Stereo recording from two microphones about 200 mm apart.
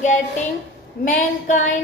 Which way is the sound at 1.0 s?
40° left (ahead or behind).